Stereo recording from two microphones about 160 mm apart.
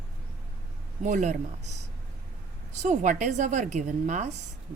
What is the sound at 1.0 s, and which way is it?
A woman's voice, 50° right (ahead or behind).